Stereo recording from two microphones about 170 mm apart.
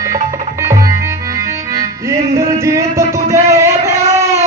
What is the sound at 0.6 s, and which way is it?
Tabla, 15° right (ahead or behind).